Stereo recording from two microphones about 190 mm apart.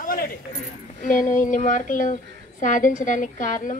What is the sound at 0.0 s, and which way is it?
Keys jangling, 50° left (ahead or behind).